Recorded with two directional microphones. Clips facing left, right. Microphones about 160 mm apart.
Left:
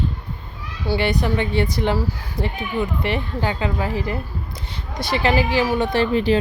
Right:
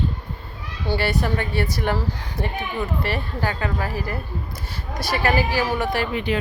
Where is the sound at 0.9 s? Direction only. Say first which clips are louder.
Left 2 dB; 15° left (ahead or behind).